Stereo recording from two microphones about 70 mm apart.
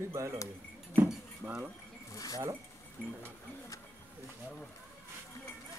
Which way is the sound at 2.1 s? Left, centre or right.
Left.